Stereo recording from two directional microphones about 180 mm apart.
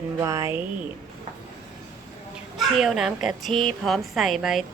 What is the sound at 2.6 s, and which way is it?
A woman's voice, centre (ahead or behind).